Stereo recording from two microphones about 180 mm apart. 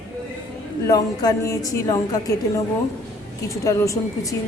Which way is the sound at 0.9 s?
20° left (ahead or behind).